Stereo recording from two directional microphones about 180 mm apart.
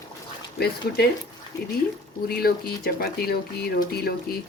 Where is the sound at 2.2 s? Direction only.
60° left (ahead or behind).